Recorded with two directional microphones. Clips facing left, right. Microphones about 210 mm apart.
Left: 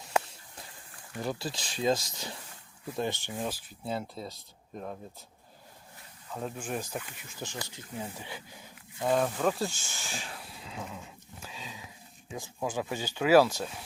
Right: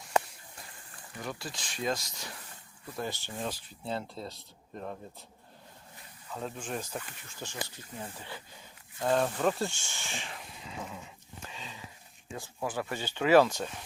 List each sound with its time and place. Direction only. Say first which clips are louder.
1.2 s speech: left 5 dB; 35° left (ahead or behind)
3.3 s speech: left 2 dB; 5° left (ahead or behind)
6.3 s speech: left 2 dB; 5° left (ahead or behind)
11.4 s sniff: left 1 dB; 10° left (ahead or behind)
12.3 s speech: left 2 dB; 10° left (ahead or behind)